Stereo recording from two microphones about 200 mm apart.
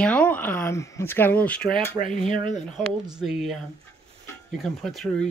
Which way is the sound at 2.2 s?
40° left (ahead or behind).